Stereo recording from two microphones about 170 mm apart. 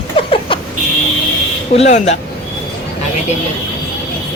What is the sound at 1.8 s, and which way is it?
Speech, 40° left (ahead or behind).